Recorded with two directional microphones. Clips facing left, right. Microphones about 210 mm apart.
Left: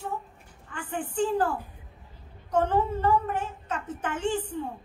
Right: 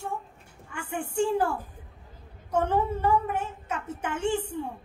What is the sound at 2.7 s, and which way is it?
A woman's voice, 10° right (ahead or behind).